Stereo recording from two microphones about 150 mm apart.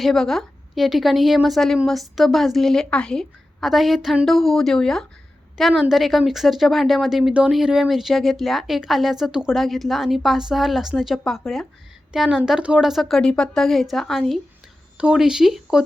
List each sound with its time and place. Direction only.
0.0 s speech: centre (ahead or behind)